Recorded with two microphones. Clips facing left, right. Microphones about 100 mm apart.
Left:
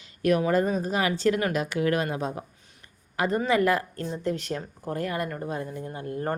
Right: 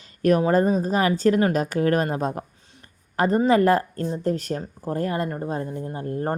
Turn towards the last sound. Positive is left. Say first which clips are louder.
# right 4 dB
turn(degrees=-35)  # may be behind; listen again after turning